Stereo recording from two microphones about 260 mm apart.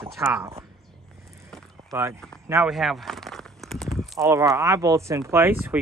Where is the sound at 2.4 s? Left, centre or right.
Centre.